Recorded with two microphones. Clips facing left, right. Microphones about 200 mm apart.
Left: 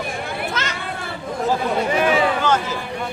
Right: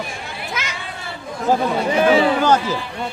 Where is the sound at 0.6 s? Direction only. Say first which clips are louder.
Left 3 dB; 10° right (ahead or behind).